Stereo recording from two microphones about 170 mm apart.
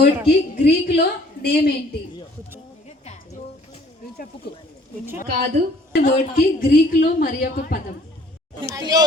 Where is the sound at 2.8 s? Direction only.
40° left (ahead or behind).